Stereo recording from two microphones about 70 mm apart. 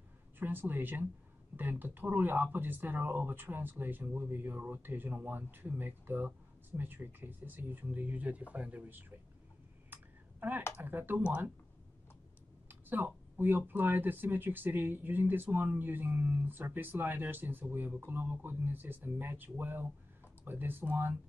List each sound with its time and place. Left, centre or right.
0.4 s speech: right
9.9 s a sound: right
10.8 s speech: right
12.6 s speech: right